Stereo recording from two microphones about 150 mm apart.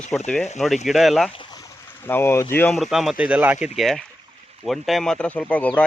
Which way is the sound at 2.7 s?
Centre (ahead or behind).